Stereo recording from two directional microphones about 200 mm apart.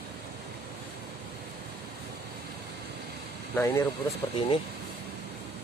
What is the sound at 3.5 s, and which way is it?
Speech, 15° left (ahead or behind).